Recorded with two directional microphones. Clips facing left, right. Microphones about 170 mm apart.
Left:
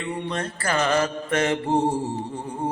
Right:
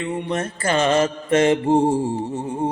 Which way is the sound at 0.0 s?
20° right (ahead or behind).